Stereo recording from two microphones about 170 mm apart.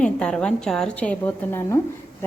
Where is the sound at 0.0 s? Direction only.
5° left (ahead or behind).